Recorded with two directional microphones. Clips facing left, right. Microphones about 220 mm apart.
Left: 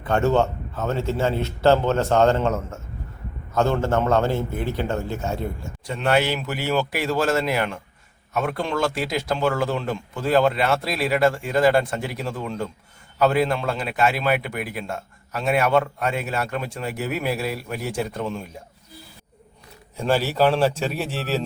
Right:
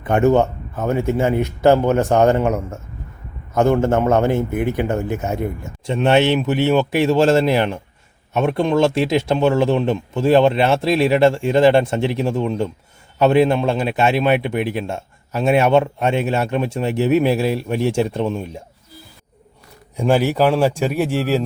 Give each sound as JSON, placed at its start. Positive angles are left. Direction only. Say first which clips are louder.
{"t": 0.0, "sound": "a man's voice", "louder": "right 5 dB", "side_deg": -15}
{"t": 20.0, "sound": "a man's voice", "louder": "right 4 dB", "side_deg": -15}